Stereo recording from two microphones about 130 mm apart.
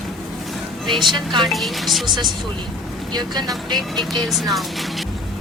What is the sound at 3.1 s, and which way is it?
Speech, 30° right (ahead or behind).